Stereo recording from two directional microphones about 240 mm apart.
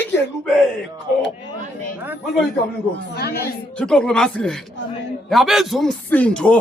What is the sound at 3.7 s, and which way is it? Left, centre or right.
Speech, centre.